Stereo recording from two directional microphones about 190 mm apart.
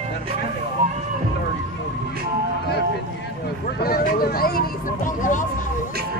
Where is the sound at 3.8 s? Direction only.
55° left (ahead or behind).